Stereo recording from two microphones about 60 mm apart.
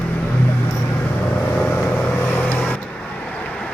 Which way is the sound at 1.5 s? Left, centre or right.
Left.